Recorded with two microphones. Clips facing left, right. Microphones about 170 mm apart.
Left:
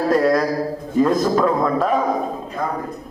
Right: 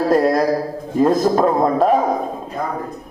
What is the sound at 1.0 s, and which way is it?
Speech, 35° right (ahead or behind).